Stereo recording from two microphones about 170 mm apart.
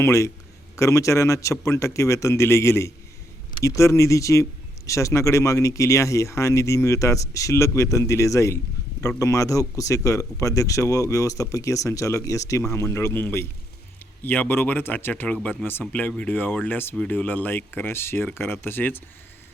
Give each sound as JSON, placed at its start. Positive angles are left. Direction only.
{"t": 0.0, "sound": "a man's voice", "side_deg": 15}